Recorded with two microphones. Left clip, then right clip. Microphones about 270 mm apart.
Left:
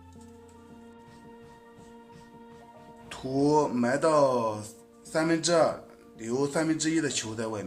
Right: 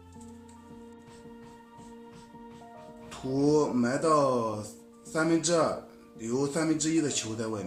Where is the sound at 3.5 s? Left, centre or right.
Left.